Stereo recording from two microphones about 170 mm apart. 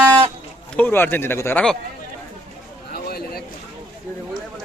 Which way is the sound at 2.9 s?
65° left (ahead or behind).